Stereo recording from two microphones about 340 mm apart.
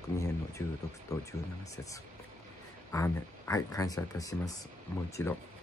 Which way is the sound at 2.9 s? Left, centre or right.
Centre.